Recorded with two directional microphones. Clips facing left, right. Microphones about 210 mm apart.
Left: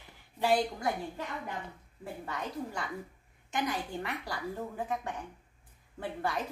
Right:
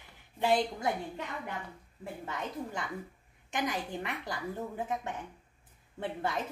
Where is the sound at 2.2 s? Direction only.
20° right (ahead or behind).